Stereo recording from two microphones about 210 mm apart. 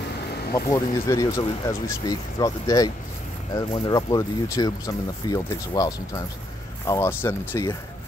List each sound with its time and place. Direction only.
0.5 s speech: 15° left (ahead or behind)